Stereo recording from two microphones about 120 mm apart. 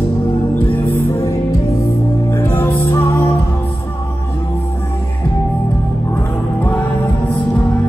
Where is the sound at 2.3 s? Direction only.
20° left (ahead or behind).